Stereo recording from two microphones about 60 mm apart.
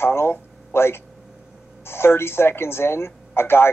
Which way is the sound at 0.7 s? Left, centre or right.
Left.